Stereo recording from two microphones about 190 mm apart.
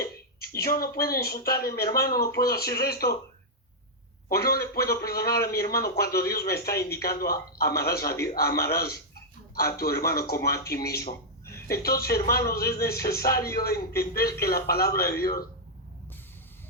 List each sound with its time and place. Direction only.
0.6 s speech: 55° left (ahead or behind)
4.3 s speech: 55° left (ahead or behind)
13.3 s speech: 15° left (ahead or behind)
13.7 s speech: 55° left (ahead or behind)